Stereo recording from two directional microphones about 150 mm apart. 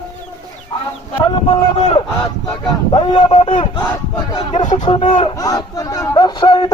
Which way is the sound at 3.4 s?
50° left (ahead or behind).